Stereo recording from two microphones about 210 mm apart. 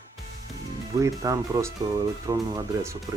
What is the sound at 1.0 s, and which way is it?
Speech, 15° right (ahead or behind).